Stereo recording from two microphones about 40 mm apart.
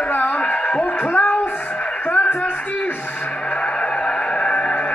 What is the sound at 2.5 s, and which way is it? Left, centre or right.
Speech, left.